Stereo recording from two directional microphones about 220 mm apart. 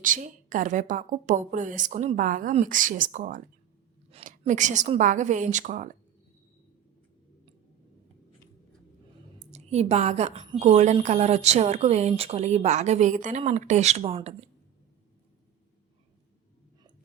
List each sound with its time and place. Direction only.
0.0 s a woman's voice: 35° right (ahead or behind)
9.5 s a woman's voice: 30° right (ahead or behind)